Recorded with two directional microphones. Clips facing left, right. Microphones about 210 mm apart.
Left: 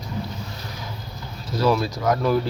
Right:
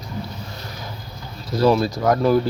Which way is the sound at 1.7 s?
35° right (ahead or behind).